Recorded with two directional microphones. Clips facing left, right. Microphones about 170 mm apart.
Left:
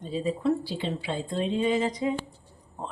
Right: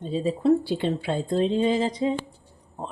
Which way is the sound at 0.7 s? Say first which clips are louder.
Right 6 dB; 55° right (ahead or behind).